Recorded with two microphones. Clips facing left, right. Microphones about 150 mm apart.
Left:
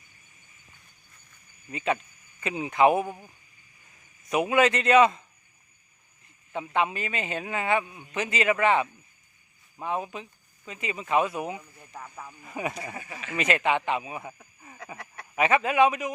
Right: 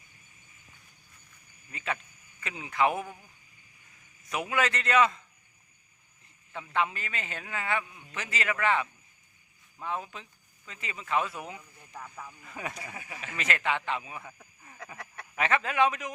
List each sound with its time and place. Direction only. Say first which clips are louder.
1.7 s a man's voice: left 7 dB; 20° left (ahead or behind)
4.3 s a man's voice: left 7 dB; 20° left (ahead or behind)
6.5 s a man's voice: left 4 dB; 20° left (ahead or behind)
14.3 s a sound: left 4 dB; 15° left (ahead or behind)
14.9 s a sound: left 6 dB; centre (ahead or behind)
15.4 s speech: left 5 dB; 15° left (ahead or behind)